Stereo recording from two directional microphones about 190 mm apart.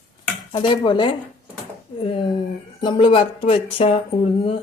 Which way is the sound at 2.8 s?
25° left (ahead or behind).